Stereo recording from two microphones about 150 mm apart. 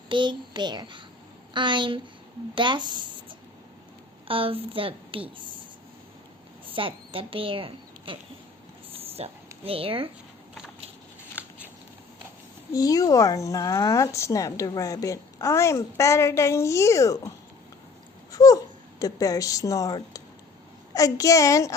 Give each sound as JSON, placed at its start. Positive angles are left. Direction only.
{"t": 0.1, "sound": "a woman's voice", "side_deg": -30}
{"t": 6.7, "sound": "a woman's voice", "side_deg": -35}
{"t": 8.9, "sound": "a sound", "side_deg": -40}
{"t": 9.6, "sound": "a woman's voice", "side_deg": -40}
{"t": 12.7, "sound": "speech", "side_deg": 25}